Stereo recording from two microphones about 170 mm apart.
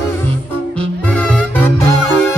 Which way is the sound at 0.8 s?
5° left (ahead or behind).